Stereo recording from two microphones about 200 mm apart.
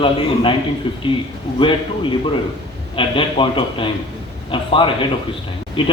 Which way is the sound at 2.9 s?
25° left (ahead or behind).